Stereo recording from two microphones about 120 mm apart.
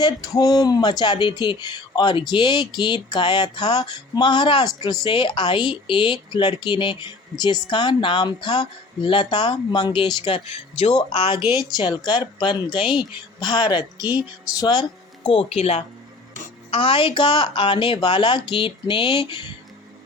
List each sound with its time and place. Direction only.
0.0 s speech: 30° left (ahead or behind)
15.3 s speech: 55° left (ahead or behind)
16.7 s speech: 50° left (ahead or behind)